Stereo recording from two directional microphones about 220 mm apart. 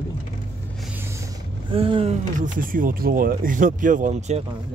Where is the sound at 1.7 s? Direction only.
25° right (ahead or behind).